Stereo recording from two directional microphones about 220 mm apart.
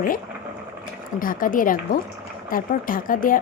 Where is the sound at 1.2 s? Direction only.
40° left (ahead or behind).